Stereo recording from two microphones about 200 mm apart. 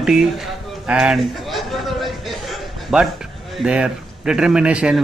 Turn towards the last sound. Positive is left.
turn(degrees=-5)  # may be behind; listen again after turning